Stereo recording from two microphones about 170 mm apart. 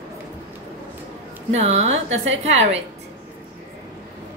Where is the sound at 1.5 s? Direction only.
40° right (ahead or behind).